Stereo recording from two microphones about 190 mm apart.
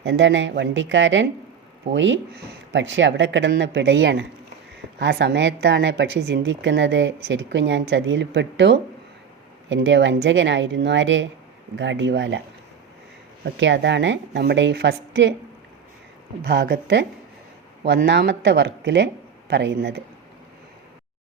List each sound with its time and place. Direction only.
0.0 s a woman's voice: 70° right (ahead or behind)
13.4 s a woman's voice: 70° right (ahead or behind)
16.4 s speech: 60° right (ahead or behind)